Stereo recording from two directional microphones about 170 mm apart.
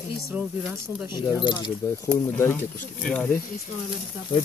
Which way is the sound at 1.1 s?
30° left (ahead or behind).